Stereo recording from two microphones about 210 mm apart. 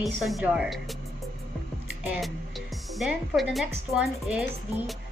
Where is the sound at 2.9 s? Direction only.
Centre (ahead or behind).